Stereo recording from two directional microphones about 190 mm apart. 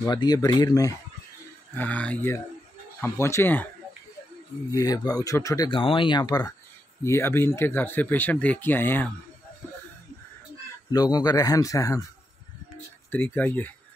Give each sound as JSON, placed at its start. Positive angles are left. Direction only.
{"t": 0.0, "sound": "speech", "side_deg": 20}
{"t": 1.8, "sound": "speech", "side_deg": 5}
{"t": 4.7, "sound": "speech", "side_deg": 20}
{"t": 10.9, "sound": "speech", "side_deg": 20}
{"t": 13.1, "sound": "speech", "side_deg": 10}